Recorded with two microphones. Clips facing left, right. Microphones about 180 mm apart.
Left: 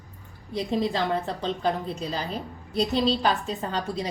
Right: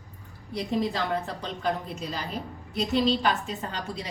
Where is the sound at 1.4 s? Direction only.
30° left (ahead or behind).